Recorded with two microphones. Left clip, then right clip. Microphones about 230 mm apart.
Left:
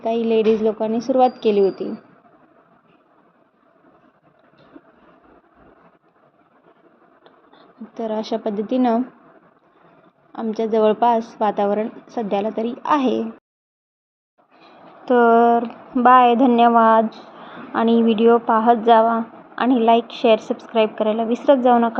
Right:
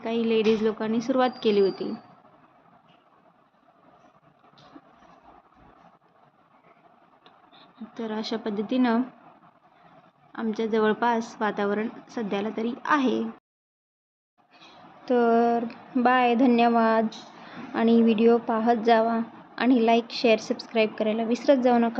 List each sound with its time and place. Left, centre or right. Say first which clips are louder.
0.0 s a woman's voice: left 6 dB; centre
7.9 s a woman's voice: left 8 dB; centre
10.3 s a woman's voice: left 6 dB; centre
15.0 s a woman's voice: left 8 dB; centre
16.6 s a woman's voice: left 8 dB; centre
17.9 s a woman's voice: left 4 dB; right
18.3 s a woman's voice: left 7 dB; centre